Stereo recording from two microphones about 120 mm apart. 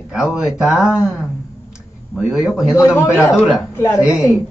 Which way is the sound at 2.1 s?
5° right (ahead or behind).